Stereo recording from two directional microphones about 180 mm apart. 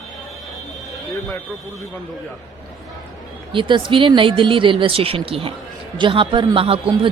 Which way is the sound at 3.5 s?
25° right (ahead or behind).